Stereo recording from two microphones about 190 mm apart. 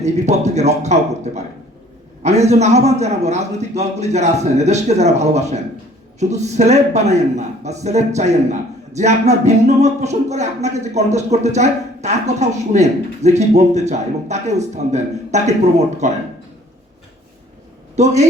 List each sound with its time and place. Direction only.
0.0 s a man's voice: 35° right (ahead or behind)
17.9 s a man's voice: 35° right (ahead or behind)